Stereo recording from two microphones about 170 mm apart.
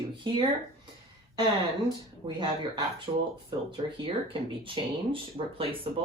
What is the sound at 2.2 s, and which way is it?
Speech, 25° right (ahead or behind).